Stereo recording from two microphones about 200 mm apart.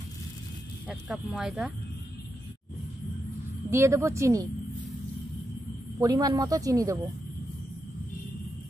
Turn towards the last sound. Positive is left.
turn(degrees=-15)  # may be behind; listen again after turning